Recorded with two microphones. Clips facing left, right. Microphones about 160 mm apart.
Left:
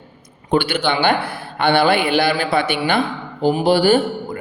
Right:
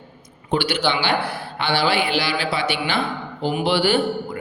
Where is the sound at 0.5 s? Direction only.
55° left (ahead or behind).